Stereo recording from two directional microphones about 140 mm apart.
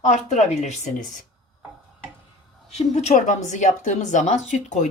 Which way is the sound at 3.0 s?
55° left (ahead or behind).